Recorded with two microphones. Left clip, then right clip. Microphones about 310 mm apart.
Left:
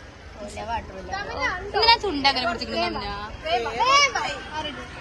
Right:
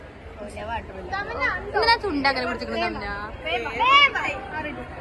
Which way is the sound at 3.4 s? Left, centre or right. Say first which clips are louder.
Even; left.